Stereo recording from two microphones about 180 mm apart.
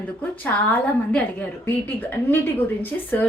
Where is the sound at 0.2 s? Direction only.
10° left (ahead or behind).